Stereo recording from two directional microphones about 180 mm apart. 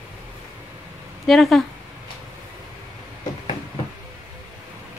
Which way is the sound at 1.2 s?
Centre (ahead or behind).